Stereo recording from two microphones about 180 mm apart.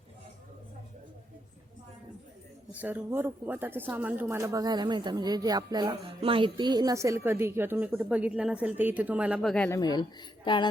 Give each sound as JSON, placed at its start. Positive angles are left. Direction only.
{"t": 2.7, "sound": "speech", "side_deg": -10}
{"t": 9.6, "sound": "speech", "side_deg": 20}